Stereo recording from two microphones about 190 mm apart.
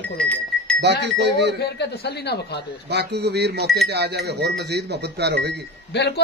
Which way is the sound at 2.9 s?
60° right (ahead or behind).